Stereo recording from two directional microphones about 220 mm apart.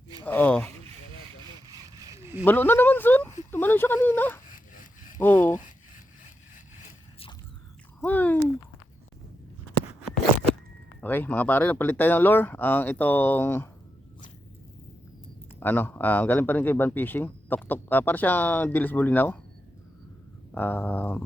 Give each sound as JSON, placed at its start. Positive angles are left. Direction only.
{"t": 0.3, "sound": "speech", "side_deg": 5}
{"t": 2.0, "sound": "zipper", "side_deg": -15}
{"t": 2.4, "sound": "speech", "side_deg": 10}
{"t": 4.4, "sound": "a sound", "side_deg": 35}
{"t": 5.1, "sound": "speech", "side_deg": 10}
{"t": 8.0, "sound": "a sound", "side_deg": 10}
{"t": 11.0, "sound": "speech", "side_deg": 10}
{"t": 15.6, "sound": "speech", "side_deg": 10}
{"t": 20.5, "sound": "speech", "side_deg": 10}